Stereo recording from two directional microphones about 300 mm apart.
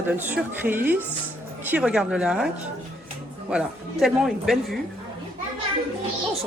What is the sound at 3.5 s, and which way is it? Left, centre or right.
Speech, centre.